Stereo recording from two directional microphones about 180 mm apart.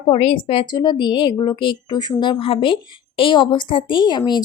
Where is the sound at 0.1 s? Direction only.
30° left (ahead or behind).